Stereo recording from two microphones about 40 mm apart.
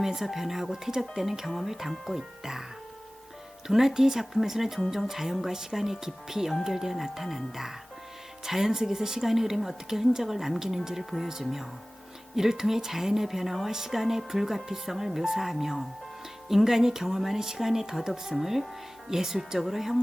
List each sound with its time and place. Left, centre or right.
0.0 s a woman's voice: centre
3.7 s a woman's voice: centre